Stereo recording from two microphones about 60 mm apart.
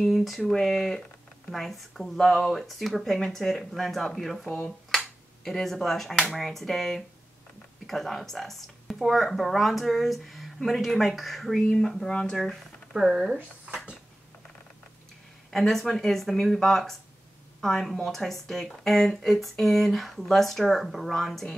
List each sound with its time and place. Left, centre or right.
0.0 s speech: centre
4.6 s finger snapping: centre
6.3 s speech: centre
12.9 s speech: centre
15.5 s speech: centre